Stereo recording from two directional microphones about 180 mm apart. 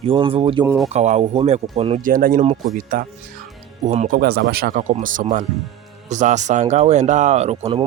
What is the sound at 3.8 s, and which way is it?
Speech, 40° right (ahead or behind).